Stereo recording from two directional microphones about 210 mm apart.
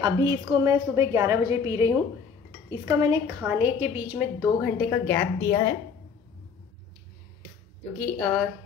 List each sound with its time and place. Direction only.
0.0 s a woman's voice: 20° right (ahead or behind)
3.4 s a woman's voice: 10° right (ahead or behind)
4.6 s a woman's voice: 5° left (ahead or behind)
8.0 s a woman's voice: centre (ahead or behind)